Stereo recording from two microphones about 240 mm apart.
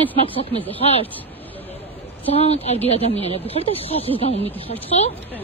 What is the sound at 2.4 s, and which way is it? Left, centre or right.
Speech, left.